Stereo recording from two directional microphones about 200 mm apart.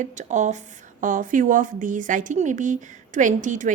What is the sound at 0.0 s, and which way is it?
Speech, 40° right (ahead or behind).